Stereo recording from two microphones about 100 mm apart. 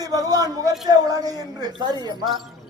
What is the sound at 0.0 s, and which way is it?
A man's voice, 40° right (ahead or behind).